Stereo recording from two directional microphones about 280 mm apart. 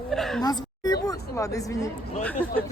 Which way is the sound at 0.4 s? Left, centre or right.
Centre.